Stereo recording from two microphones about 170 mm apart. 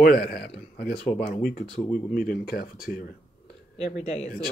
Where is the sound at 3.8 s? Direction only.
40° left (ahead or behind).